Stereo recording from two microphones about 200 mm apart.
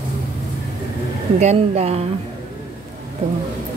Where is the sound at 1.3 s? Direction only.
35° right (ahead or behind).